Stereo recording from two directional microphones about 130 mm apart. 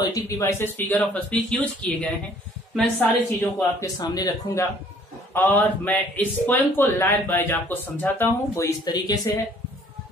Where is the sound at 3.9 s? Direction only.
30° left (ahead or behind).